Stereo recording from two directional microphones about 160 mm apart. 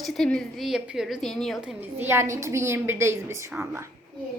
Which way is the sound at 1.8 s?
15° right (ahead or behind).